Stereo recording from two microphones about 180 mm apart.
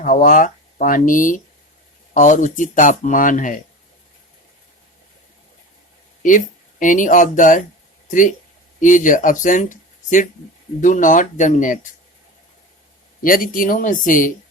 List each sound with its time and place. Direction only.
0.0 s speech: 45° left (ahead or behind)
6.2 s speech: 45° left (ahead or behind)
8.8 s speech: 45° left (ahead or behind)
13.2 s speech: 50° left (ahead or behind)